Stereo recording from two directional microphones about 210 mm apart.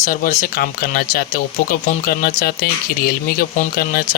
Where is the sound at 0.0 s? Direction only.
40° left (ahead or behind).